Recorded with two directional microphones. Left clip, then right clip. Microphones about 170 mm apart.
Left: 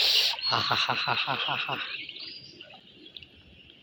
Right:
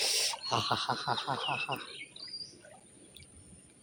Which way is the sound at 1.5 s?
15° left (ahead or behind).